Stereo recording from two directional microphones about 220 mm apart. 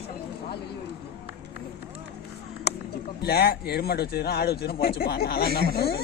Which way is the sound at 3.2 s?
45° left (ahead or behind).